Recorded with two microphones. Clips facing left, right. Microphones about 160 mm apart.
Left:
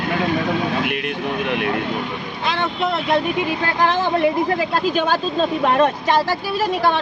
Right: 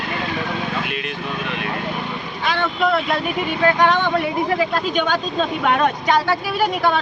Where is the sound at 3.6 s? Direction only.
30° left (ahead or behind).